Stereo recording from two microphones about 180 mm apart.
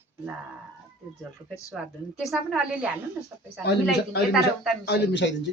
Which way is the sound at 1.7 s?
Centre (ahead or behind).